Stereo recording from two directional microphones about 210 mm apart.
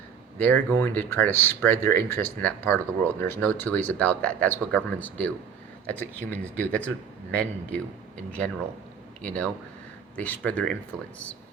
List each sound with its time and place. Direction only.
0.3 s speech: 10° left (ahead or behind)